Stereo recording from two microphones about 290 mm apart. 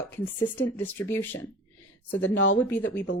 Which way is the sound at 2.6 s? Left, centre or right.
Centre.